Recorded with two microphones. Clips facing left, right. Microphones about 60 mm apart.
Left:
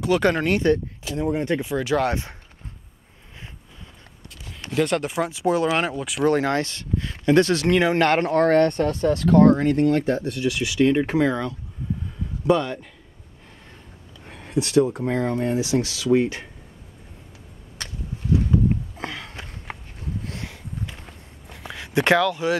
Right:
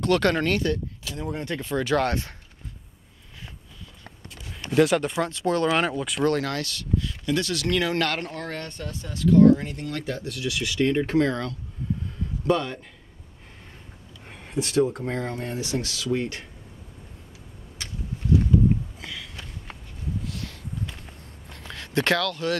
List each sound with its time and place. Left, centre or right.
0.0 s speech: centre
0.6 s speech: left
1.7 s speech: centre
4.5 s speech: centre
6.2 s speech: left
8.3 s speech: left
9.8 s speech: left; by 12.8 s centre
14.2 s a sound: centre
14.6 s speech: centre
18.9 s sniff: left
21.5 s a sound: centre